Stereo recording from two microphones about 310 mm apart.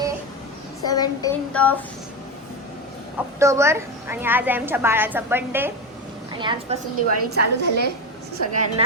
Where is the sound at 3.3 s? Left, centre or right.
Centre.